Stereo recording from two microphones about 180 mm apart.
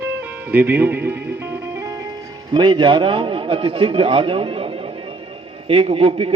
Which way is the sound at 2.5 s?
25° right (ahead or behind).